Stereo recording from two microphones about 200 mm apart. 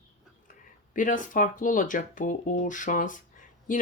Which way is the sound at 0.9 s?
40° left (ahead or behind).